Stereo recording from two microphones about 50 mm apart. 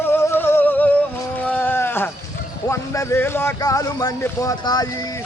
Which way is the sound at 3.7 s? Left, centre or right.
Left.